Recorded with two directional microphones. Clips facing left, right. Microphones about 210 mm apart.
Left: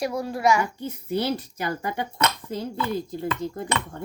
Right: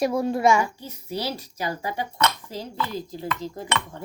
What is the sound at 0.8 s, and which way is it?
Speech, 55° left (ahead or behind).